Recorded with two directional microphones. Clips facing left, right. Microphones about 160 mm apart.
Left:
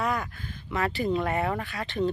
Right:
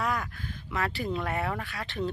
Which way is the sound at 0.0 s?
Centre (ahead or behind).